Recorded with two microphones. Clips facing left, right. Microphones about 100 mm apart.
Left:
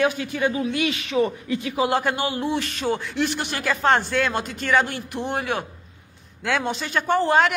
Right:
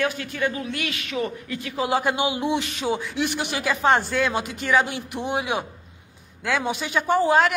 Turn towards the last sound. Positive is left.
turn(degrees=-5)  # may be behind; listen again after turning